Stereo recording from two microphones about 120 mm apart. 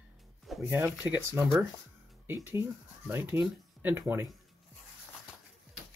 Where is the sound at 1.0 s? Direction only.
15° right (ahead or behind).